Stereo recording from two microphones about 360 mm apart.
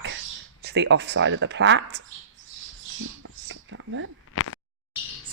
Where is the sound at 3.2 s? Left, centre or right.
Right.